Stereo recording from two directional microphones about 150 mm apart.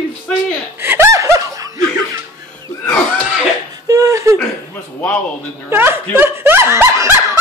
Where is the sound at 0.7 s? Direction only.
15° right (ahead or behind).